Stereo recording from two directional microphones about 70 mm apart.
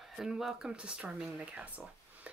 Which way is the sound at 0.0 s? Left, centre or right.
Centre.